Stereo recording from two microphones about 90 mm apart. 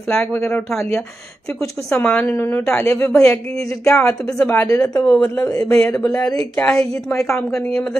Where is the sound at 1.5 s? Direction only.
35° left (ahead or behind).